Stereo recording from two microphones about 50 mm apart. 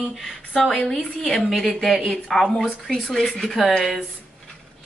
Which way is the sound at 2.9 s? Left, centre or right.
Centre.